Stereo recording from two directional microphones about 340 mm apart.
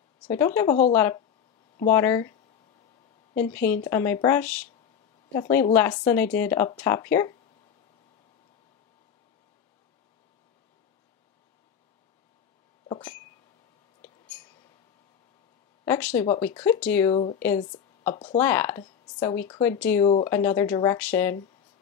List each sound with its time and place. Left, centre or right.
0.9 s speech: centre
3.3 s speech: centre
12.8 s a sound: centre
15.8 s speech: centre